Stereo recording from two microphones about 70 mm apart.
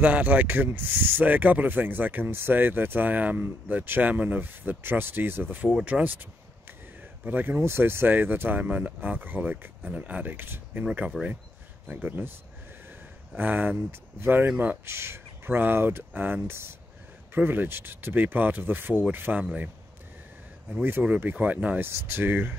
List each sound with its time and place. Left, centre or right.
0.0 s speech: right
7.2 s speech: right
10.3 s speech: right
11.1 s speech: centre
11.9 s speech: right
13.4 s speech: right
21.2 s speech: right
21.7 s speech: right